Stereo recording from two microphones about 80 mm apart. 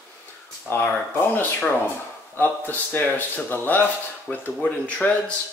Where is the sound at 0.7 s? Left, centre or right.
Left.